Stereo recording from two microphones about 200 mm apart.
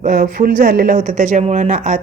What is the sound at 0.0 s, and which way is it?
A woman's voice, 45° right (ahead or behind).